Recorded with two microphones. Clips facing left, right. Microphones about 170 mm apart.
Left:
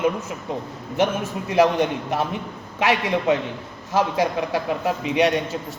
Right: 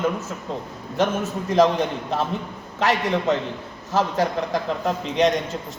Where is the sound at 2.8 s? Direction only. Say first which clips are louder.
Even; 10° left (ahead or behind).